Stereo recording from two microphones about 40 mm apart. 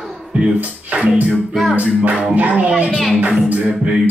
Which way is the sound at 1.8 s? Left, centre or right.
Right.